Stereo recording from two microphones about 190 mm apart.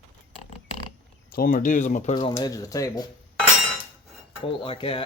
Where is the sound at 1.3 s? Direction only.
50° left (ahead or behind); by 2.3 s 30° left (ahead or behind).